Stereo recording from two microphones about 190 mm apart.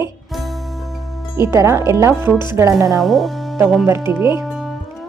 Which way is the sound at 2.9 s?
Centre (ahead or behind).